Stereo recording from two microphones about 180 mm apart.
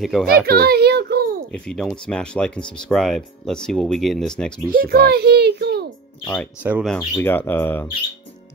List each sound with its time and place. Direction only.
0.0 s speech: centre (ahead or behind)
0.5 s child singing: 60° right (ahead or behind)
1.5 s speech: 5° left (ahead or behind)
4.7 s a child's voice: 55° right (ahead or behind)
6.6 s speech: 10° right (ahead or behind)
7.0 s speech: 15° left (ahead or behind)